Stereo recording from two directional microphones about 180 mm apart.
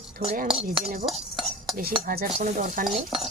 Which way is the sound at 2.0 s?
50° right (ahead or behind).